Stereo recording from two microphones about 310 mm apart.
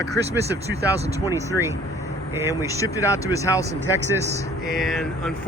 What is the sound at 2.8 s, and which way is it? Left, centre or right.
Speech, centre.